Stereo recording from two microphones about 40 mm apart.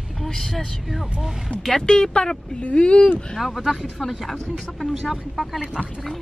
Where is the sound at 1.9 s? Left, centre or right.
Centre.